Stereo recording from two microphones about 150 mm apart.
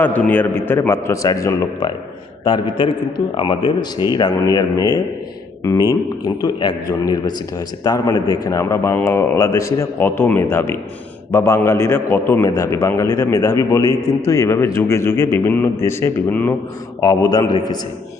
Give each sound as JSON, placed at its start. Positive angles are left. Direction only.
{"t": 0.0, "sound": "a man's voice", "side_deg": 10}
{"t": 2.4, "sound": "a man's voice", "side_deg": 30}
{"t": 17.0, "sound": "a man's voice", "side_deg": 25}